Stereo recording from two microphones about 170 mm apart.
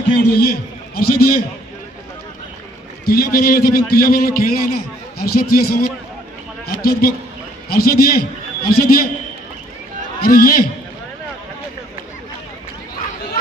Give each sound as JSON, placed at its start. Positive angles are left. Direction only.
{"t": 0.4, "sound": "a man's voice", "side_deg": 60}
{"t": 3.1, "sound": "a man's voice", "side_deg": 60}
{"t": 10.2, "sound": "a man's voice", "side_deg": 60}